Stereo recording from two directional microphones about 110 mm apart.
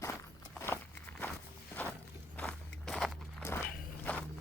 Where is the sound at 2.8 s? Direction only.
Centre (ahead or behind).